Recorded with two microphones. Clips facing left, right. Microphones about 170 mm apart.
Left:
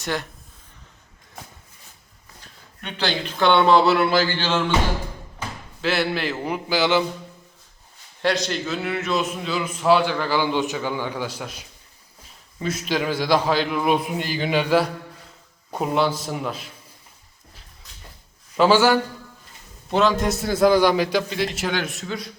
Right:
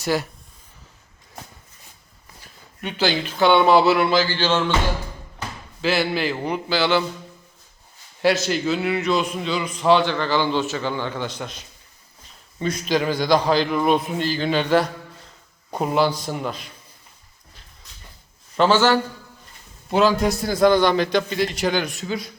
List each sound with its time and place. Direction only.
0.0 s speech: 5° right (ahead or behind)
2.8 s speech: 5° right (ahead or behind)
5.8 s a man's voice: centre (ahead or behind)
6.7 s a man's voice: 15° left (ahead or behind)
8.2 s a man's voice: 5° right (ahead or behind)
18.5 s a man's voice: 10° left (ahead or behind)
19.9 s a man's voice: centre (ahead or behind)